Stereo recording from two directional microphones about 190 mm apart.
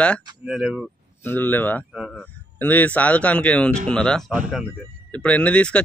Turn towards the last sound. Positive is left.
turn(degrees=5)  # may be behind; listen again after turning